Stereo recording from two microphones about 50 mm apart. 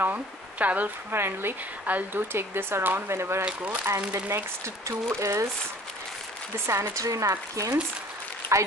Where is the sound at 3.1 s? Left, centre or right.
Right.